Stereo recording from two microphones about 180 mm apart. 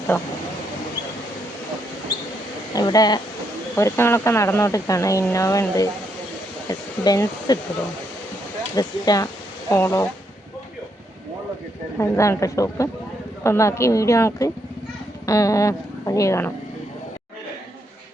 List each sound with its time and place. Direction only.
2.7 s speech: 20° left (ahead or behind)
8.7 s speech: 20° left (ahead or behind)
11.9 s speech: 15° left (ahead or behind)